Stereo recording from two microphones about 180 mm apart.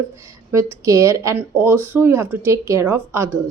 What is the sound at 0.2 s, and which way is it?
Speech, 15° right (ahead or behind).